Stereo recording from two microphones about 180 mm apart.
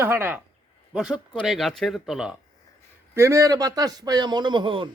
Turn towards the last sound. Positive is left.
turn(degrees=-25)  # may be behind; listen again after turning